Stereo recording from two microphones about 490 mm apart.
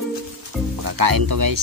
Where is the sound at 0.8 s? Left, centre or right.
Right.